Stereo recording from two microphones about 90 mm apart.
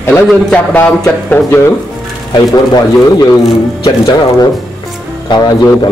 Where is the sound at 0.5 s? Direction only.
15° left (ahead or behind).